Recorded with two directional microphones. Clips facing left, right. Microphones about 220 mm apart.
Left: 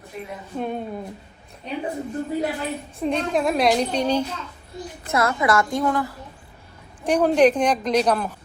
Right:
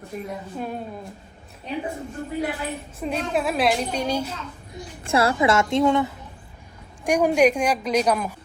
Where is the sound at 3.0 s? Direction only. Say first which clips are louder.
Left 3 dB; 5° right (ahead or behind).